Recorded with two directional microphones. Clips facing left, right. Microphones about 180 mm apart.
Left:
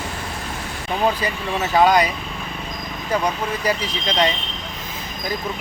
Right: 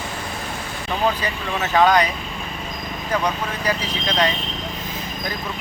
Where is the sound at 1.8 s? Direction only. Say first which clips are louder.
Left 1 dB; 10° left (ahead or behind).